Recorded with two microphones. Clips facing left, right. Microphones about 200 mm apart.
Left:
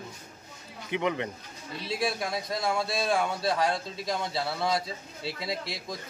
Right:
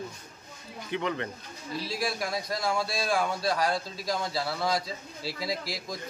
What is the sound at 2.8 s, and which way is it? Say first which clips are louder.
Speech: left 1 dB; 25° left (ahead or behind).